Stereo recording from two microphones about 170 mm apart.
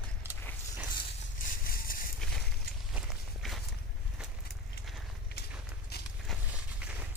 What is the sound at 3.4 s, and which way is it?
Walk, centre (ahead or behind).